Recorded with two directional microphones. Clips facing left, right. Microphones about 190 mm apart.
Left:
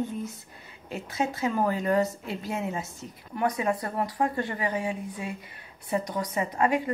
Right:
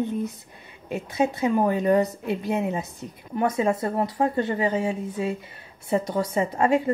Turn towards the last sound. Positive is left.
turn(degrees=-25)  # may be behind; listen again after turning